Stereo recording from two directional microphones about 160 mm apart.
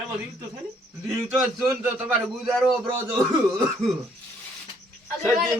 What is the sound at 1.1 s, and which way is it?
Speech, 20° right (ahead or behind).